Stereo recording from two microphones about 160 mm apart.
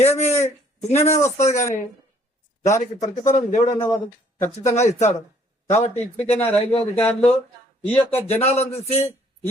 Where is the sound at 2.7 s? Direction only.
50° left (ahead or behind).